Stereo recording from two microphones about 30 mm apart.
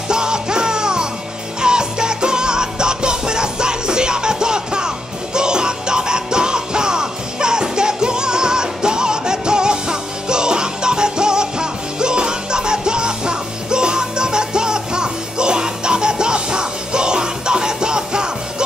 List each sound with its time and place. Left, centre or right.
0.1 s music: right